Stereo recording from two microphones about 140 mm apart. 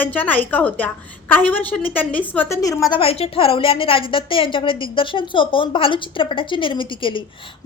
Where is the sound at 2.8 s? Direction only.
40° left (ahead or behind).